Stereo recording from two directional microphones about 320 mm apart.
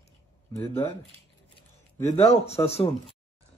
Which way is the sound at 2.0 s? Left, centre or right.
Centre.